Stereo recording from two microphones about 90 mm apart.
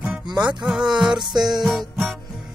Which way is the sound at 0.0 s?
10° right (ahead or behind).